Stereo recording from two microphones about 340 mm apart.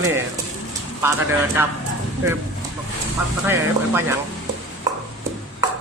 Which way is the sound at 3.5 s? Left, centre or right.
Centre.